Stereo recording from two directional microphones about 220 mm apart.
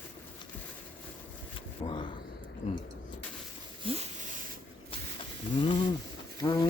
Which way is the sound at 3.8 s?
25° right (ahead or behind).